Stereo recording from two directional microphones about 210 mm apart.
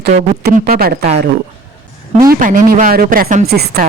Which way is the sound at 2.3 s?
40° right (ahead or behind).